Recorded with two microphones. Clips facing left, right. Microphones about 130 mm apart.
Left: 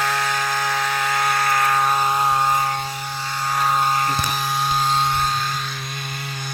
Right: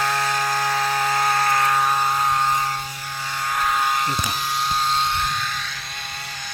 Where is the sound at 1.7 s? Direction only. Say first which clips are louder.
Left 1 dB; centre (ahead or behind).